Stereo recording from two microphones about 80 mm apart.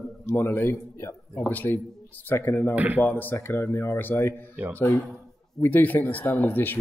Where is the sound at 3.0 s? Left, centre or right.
Left.